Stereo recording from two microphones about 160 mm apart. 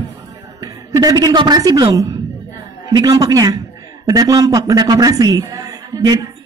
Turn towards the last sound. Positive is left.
turn(degrees=-25)  # may be behind; listen again after turning